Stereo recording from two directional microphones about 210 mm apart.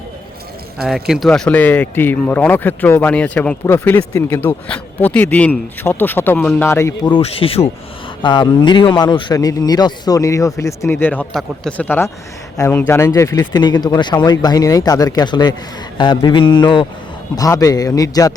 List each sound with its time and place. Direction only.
0.8 s a man's voice: centre (ahead or behind); by 18.3 s 15° left (ahead or behind)